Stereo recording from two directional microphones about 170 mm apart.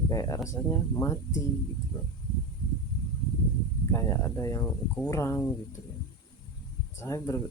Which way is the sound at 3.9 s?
15° left (ahead or behind).